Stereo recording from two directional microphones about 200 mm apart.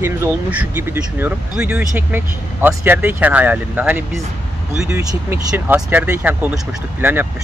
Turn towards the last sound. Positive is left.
turn(degrees=-10)  # may be behind; listen again after turning